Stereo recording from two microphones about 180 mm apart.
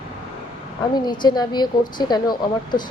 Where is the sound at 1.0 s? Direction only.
25° left (ahead or behind).